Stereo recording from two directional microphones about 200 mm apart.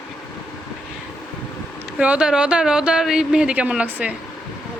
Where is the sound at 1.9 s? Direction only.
5° right (ahead or behind).